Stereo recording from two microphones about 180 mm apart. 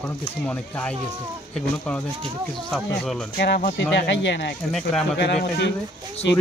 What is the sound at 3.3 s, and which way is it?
Speech, 60° left (ahead or behind).